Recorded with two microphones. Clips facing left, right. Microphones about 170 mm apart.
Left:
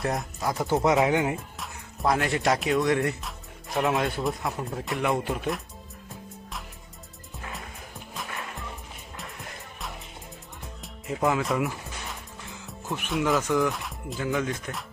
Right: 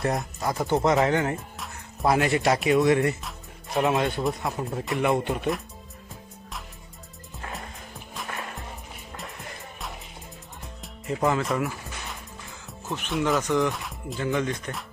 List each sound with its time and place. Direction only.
0.0 s speech: centre (ahead or behind)
2.0 s speech: 5° right (ahead or behind)
8.3 s music: 45° right (ahead or behind)
11.0 s speech: centre (ahead or behind)
12.9 s speech: centre (ahead or behind)